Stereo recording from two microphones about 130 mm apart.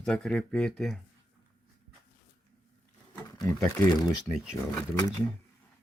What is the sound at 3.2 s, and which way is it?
Speech, 25° left (ahead or behind).